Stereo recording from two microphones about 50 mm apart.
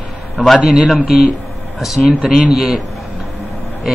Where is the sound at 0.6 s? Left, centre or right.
Centre.